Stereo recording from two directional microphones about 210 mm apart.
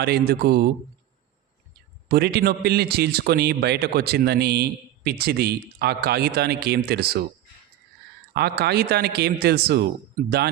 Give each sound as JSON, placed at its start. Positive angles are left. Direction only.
{"t": 0.0, "sound": "a man's voice", "side_deg": -50}
{"t": 2.0, "sound": "a man's voice", "side_deg": -50}
{"t": 8.3, "sound": "a man's voice", "side_deg": -50}